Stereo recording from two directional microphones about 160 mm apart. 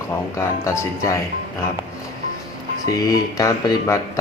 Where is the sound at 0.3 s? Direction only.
20° left (ahead or behind).